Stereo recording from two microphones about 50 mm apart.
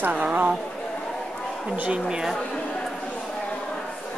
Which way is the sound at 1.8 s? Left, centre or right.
Centre.